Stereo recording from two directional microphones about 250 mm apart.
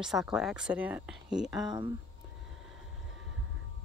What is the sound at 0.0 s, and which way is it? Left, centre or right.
Speech, centre.